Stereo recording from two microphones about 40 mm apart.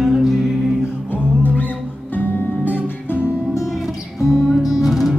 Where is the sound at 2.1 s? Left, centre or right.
Left.